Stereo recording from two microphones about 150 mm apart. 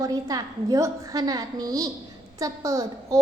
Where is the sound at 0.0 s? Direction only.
25° right (ahead or behind).